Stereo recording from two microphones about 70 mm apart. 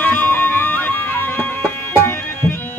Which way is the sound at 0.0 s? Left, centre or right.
Left.